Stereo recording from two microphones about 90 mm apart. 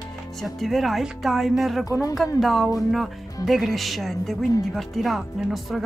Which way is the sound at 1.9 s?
40° left (ahead or behind).